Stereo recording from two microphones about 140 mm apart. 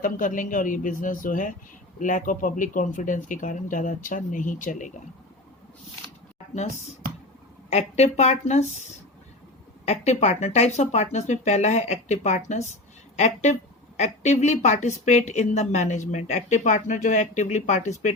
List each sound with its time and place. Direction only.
0.0 s speech: 70° left (ahead or behind)
7.7 s speech: 50° left (ahead or behind)